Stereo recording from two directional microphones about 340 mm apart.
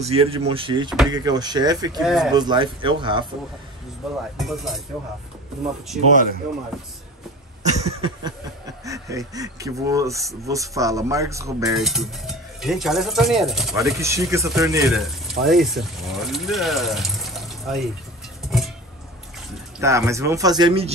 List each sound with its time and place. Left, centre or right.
0.0 s speech: centre
2.0 s speech: centre
2.3 s speech: centre
4.0 s speech: centre
6.7 s speech: centre
7.6 s a sound: centre
8.8 s speech: centre
19.8 s speech: centre